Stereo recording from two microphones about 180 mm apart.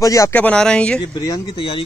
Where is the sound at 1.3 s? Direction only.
25° left (ahead or behind).